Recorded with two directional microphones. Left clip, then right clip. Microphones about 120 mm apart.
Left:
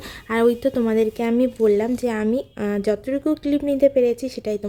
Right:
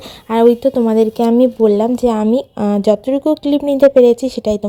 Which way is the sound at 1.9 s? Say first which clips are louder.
Right 8 dB; 25° right (ahead or behind).